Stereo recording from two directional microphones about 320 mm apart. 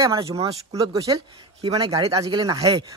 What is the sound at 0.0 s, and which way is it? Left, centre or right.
A man's voice, centre.